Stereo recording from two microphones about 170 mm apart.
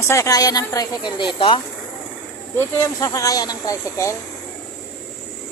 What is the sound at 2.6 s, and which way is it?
A woman's voice, 15° left (ahead or behind).